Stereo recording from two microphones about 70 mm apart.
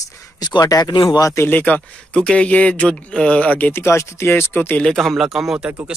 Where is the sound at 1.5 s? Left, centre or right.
Left.